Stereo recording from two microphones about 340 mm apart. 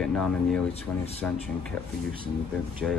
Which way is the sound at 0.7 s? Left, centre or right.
Centre.